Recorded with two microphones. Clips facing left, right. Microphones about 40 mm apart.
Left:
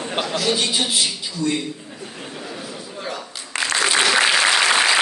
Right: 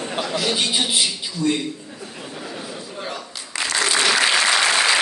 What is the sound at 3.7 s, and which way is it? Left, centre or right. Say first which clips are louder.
Applause: left 1 dB; centre.